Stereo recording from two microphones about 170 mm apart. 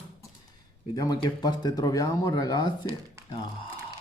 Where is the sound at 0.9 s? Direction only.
25° left (ahead or behind).